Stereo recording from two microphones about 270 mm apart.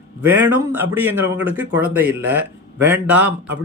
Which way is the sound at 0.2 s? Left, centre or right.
Centre.